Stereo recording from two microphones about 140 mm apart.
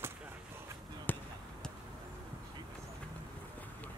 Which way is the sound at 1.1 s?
10° left (ahead or behind).